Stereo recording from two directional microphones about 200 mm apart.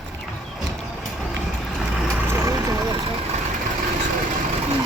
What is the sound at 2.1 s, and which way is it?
Vehicle, 10° right (ahead or behind).